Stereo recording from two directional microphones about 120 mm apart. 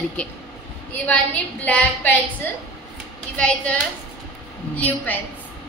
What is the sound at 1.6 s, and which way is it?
A woman's voice, 10° left (ahead or behind).